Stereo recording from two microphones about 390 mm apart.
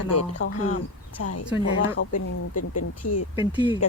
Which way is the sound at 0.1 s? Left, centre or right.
Left.